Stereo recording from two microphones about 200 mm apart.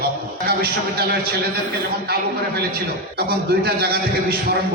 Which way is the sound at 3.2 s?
50° right (ahead or behind).